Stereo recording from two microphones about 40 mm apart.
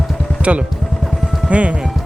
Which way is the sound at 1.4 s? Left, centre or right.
Right.